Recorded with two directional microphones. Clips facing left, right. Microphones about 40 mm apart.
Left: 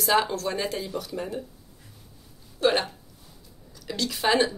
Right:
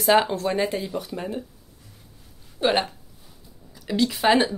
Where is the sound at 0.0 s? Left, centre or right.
Right.